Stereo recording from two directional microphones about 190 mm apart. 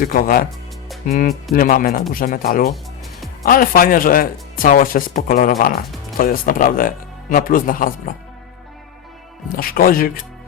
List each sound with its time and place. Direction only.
0.0 s speech: 45° left (ahead or behind)
9.6 s speech: 50° left (ahead or behind)